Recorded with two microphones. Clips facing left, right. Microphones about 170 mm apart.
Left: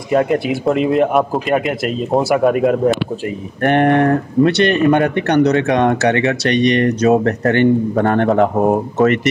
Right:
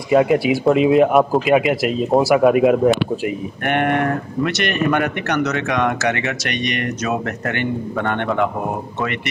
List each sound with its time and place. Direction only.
0.1 s speech: 5° right (ahead or behind)
3.6 s speech: 35° left (ahead or behind)